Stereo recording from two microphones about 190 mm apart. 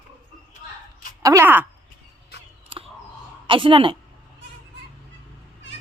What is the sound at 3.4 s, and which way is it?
Speech, 25° right (ahead or behind).